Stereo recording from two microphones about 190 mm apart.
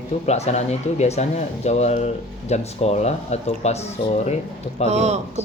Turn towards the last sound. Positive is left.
turn(degrees=-35)  # may be behind; listen again after turning